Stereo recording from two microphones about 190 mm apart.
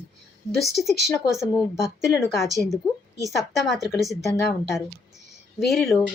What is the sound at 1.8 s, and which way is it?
Speech, 15° left (ahead or behind).